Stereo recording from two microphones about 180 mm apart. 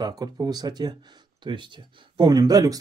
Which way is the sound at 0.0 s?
20° right (ahead or behind).